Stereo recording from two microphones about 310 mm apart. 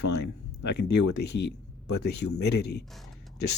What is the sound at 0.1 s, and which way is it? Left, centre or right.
Speech, left.